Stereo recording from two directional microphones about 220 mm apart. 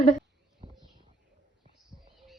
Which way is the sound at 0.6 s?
30° right (ahead or behind).